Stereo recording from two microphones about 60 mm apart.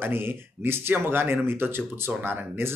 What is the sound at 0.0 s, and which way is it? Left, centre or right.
Speech, right.